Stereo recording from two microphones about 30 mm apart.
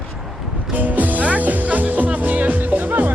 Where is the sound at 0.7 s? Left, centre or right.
Right.